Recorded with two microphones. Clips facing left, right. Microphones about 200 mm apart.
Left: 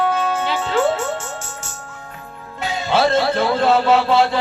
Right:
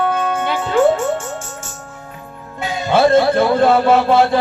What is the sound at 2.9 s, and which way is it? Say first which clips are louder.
Music: right 5 dB; 50° right (ahead or behind).